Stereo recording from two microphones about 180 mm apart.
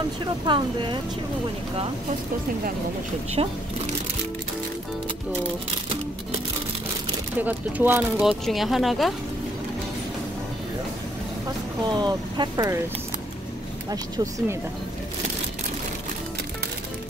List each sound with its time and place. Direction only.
0.5 s speech: 25° right (ahead or behind)
3.4 s speech: 30° right (ahead or behind)
7.3 s speech: 10° right (ahead or behind)
11.9 s speech: 25° right (ahead or behind)
13.8 s speech: 20° right (ahead or behind)